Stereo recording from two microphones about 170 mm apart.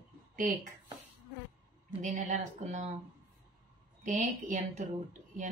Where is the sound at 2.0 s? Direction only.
45° right (ahead or behind).